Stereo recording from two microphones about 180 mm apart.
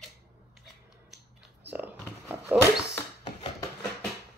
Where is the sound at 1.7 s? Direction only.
10° right (ahead or behind).